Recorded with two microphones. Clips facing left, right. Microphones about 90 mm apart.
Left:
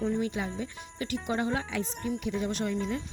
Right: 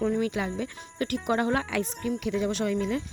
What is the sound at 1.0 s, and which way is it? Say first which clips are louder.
Speech: right 4 dB; 60° right (ahead or behind).